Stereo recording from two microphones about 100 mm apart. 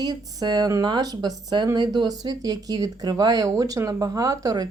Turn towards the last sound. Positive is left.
turn(degrees=-40)  # may be behind; listen again after turning